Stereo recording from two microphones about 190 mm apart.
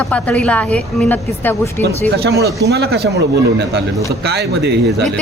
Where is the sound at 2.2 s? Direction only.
60° right (ahead or behind).